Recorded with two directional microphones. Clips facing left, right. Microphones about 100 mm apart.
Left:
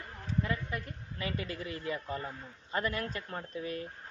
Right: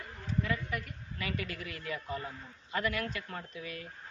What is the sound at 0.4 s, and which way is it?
A woman's voice, 30° left (ahead or behind).